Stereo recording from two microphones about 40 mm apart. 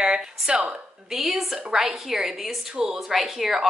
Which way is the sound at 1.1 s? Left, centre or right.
Centre.